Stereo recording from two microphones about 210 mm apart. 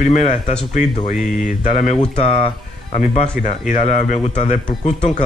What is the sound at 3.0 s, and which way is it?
Speech, 35° left (ahead or behind).